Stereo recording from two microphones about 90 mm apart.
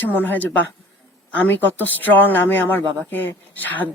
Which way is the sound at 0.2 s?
20° left (ahead or behind).